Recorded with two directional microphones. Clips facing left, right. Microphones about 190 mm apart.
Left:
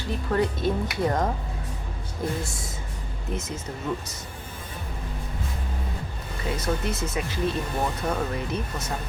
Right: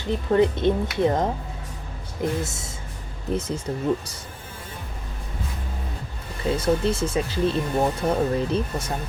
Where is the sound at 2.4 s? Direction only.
25° right (ahead or behind).